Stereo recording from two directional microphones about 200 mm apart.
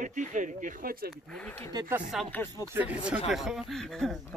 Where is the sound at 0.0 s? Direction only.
40° right (ahead or behind).